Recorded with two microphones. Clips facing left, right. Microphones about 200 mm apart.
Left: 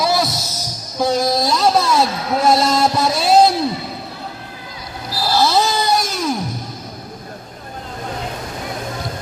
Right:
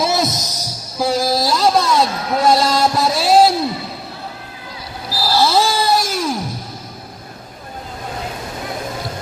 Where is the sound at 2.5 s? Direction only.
Centre (ahead or behind).